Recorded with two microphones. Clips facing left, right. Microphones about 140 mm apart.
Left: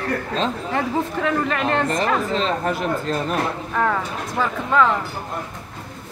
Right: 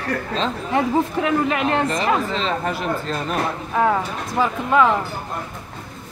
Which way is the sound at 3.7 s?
15° right (ahead or behind).